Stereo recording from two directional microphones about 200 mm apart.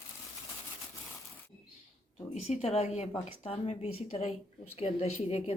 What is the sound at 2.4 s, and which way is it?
A woman's voice, 30° left (ahead or behind).